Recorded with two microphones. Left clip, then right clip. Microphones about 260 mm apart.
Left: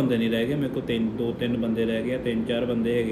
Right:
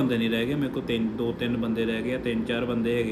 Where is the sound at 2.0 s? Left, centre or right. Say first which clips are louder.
Left 1 dB; right.